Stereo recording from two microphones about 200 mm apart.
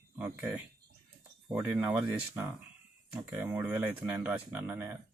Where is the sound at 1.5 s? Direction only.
10° right (ahead or behind).